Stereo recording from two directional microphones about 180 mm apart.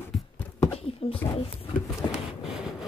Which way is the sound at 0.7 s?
30° left (ahead or behind).